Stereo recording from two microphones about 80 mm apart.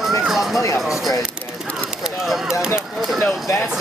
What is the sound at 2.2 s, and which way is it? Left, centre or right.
Speech, centre.